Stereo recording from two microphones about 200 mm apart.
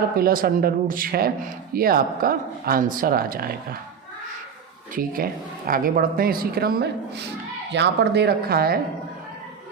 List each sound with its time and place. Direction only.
0.2 s speech: 45° right (ahead or behind)
4.9 s speech: 45° right (ahead or behind)